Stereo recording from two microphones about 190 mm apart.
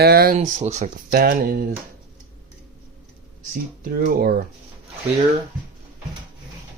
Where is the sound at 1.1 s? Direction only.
50° right (ahead or behind).